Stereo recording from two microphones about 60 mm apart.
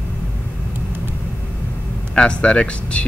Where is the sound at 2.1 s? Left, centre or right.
Centre.